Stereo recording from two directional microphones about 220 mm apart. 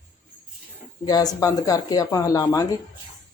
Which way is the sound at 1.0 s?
15° left (ahead or behind).